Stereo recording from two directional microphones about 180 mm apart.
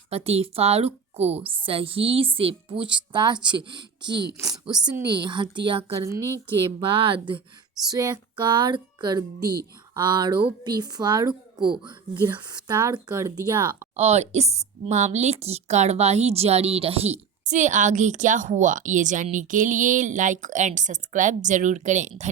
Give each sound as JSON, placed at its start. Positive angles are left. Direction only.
{"t": 0.1, "sound": "speech", "side_deg": -35}
{"t": 4.1, "sound": "speech", "side_deg": -70}
{"t": 4.9, "sound": "speech", "side_deg": -25}
{"t": 13.9, "sound": "speech", "side_deg": -40}